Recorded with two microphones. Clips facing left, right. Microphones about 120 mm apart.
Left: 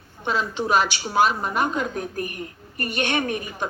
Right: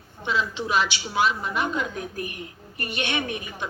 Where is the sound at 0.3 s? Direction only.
45° left (ahead or behind).